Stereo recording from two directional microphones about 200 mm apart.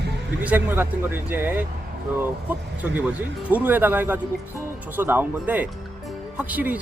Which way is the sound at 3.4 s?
10° right (ahead or behind).